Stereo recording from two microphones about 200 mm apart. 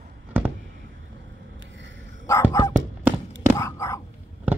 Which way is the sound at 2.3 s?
15° left (ahead or behind).